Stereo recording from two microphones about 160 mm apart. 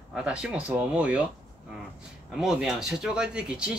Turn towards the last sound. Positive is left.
turn(degrees=-5)  # may be behind; listen again after turning